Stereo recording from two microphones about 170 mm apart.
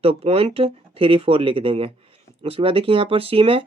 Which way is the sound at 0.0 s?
35° right (ahead or behind).